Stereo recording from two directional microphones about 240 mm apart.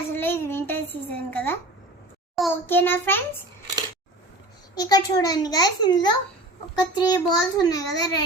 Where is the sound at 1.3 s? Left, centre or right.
Centre.